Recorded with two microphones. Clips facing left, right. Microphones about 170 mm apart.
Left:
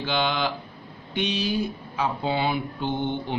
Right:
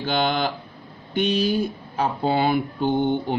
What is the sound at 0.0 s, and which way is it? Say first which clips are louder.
Speech: right 3 dB; 45° right (ahead or behind).